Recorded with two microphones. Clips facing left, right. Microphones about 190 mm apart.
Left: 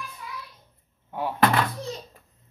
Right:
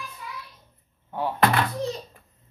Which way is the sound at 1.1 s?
10° left (ahead or behind).